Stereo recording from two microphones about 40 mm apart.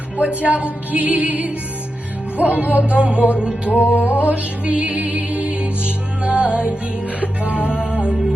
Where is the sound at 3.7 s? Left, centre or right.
Left.